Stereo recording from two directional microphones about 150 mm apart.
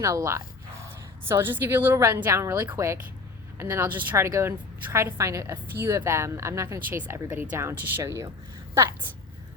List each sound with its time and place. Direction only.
0.0 s a woman's voice: 20° right (ahead or behind)